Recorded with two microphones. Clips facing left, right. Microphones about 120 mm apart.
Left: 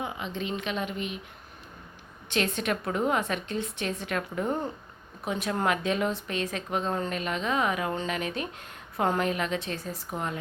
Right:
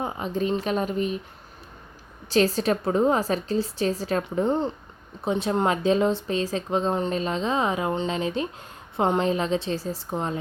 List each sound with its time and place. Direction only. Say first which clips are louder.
0.0 s a woman's voice: right 6 dB; 40° right (ahead or behind)
2.3 s a woman's voice: right 7 dB; 35° right (ahead or behind)